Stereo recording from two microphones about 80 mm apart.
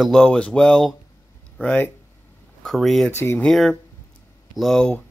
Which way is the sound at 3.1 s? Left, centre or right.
Left.